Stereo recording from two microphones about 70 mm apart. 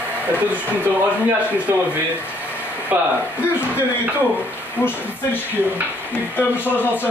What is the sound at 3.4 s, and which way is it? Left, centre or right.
Speech, left.